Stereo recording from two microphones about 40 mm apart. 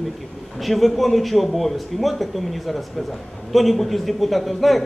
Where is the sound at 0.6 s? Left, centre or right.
Centre.